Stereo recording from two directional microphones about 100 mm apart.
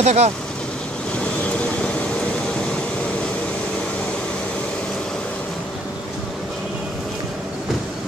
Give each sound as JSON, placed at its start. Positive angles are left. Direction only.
{"t": 0.0, "sound": "speech", "side_deg": -90}